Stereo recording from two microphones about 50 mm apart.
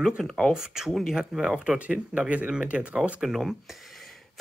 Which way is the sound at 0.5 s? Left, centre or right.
Centre.